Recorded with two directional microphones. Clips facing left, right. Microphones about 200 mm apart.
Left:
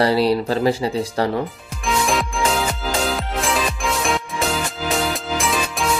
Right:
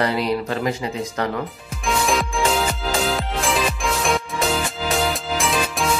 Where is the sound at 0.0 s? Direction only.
35° left (ahead or behind).